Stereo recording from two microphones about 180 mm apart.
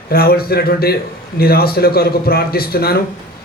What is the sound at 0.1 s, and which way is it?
A man's voice, 60° left (ahead or behind).